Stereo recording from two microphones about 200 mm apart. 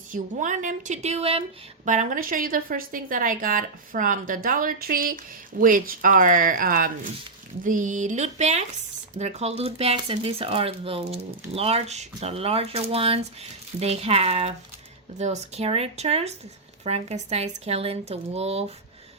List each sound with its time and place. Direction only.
0.1 s a woman's voice: 40° right (ahead or behind)